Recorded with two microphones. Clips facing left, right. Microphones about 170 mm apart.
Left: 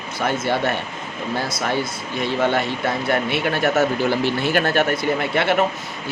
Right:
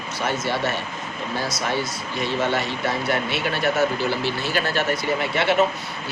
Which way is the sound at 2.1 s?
55° left (ahead or behind).